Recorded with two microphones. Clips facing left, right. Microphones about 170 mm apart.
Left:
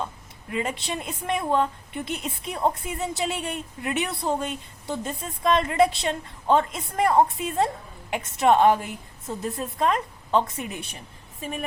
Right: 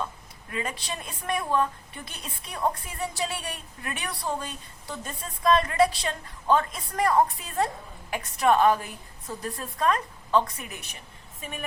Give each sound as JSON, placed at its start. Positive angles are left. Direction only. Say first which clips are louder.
{"t": 0.5, "sound": "a woman's voice", "louder": "left 5 dB", "side_deg": 25}